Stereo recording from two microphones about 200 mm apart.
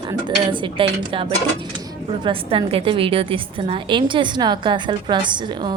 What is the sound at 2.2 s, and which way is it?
A woman's voice, 25° right (ahead or behind).